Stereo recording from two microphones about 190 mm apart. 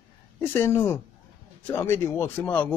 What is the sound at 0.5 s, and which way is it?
Speech, 15° left (ahead or behind).